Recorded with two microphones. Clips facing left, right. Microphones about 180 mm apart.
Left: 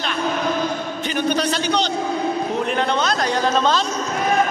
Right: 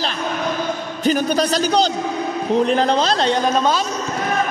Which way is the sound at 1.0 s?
40° right (ahead or behind).